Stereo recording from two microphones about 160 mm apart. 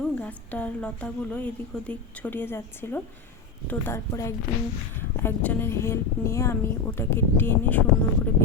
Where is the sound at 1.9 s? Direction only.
10° left (ahead or behind).